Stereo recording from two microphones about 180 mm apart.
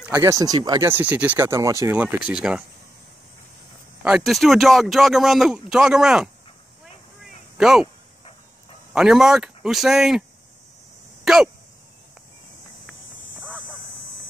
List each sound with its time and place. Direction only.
0.0 s speech: 15° right (ahead or behind)
4.0 s speech: centre (ahead or behind)
7.5 s speech: 5° right (ahead or behind)
8.9 s speech: 5° right (ahead or behind)
11.2 s speech: centre (ahead or behind)